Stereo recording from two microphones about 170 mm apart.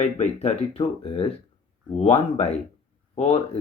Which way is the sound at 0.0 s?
40° left (ahead or behind).